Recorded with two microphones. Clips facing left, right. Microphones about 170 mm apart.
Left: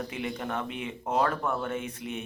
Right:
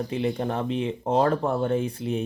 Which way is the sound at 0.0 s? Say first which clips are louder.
Right 7 dB; 30° right (ahead or behind).